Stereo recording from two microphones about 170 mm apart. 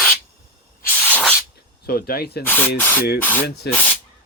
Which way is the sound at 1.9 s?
60° left (ahead or behind).